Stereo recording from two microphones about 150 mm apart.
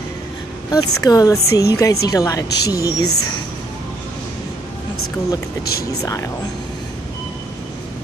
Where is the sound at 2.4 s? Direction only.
90° left.